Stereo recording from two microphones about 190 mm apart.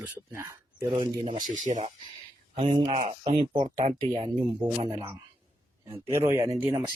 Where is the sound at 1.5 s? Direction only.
40° right (ahead or behind).